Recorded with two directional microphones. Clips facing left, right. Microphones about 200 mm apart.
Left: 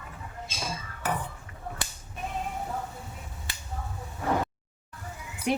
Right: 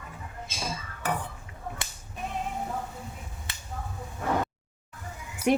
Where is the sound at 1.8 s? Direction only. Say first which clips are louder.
Left 2 dB; 25° right (ahead or behind).